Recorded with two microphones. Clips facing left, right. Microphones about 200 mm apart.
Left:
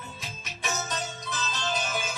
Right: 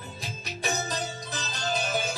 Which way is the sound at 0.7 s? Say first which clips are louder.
Right 2 dB; 35° right (ahead or behind).